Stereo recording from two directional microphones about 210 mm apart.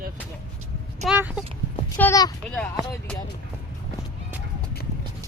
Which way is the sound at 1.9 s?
15° left (ahead or behind).